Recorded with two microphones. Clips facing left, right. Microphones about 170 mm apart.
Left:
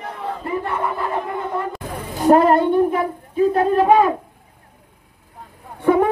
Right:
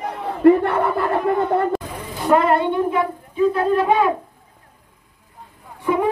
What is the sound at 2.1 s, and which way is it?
A woman's voice, 40° left (ahead or behind).